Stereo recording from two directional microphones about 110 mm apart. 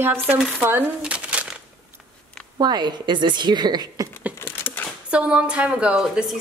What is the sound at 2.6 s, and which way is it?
A woman's voice, 40° right (ahead or behind).